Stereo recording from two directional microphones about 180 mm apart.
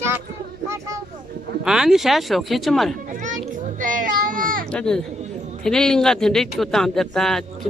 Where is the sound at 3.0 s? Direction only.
45° right (ahead or behind).